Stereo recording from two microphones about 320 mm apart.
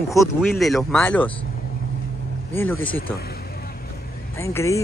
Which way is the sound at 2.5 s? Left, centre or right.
Centre.